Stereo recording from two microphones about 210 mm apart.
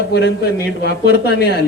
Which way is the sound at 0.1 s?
55° left (ahead or behind).